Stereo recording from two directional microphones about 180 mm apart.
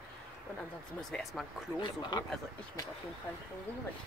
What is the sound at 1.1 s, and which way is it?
Speech, centre (ahead or behind).